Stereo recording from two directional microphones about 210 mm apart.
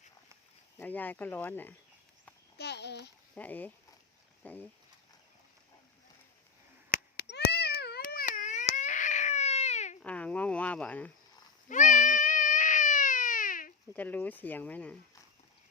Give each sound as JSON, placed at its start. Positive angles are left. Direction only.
{"t": 0.8, "sound": "speech", "side_deg": 10}
{"t": 2.6, "sound": "a child's voice", "side_deg": 55}
{"t": 3.3, "sound": "speech", "side_deg": 5}
{"t": 6.9, "sound": "a sound", "side_deg": 50}
{"t": 10.0, "sound": "speech", "side_deg": 5}
{"t": 11.7, "sound": "baby cry", "side_deg": 35}
{"t": 13.9, "sound": "speech", "side_deg": 10}